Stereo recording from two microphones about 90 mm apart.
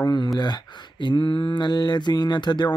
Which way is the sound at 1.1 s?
70° left (ahead or behind).